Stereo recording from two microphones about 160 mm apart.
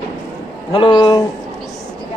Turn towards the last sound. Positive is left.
turn(degrees=25)  # may be behind; listen again after turning